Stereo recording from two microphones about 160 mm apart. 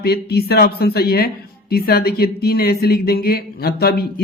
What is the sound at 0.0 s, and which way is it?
Speech, 80° left.